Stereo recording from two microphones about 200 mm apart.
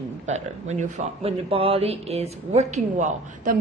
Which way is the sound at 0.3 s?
35° right (ahead or behind).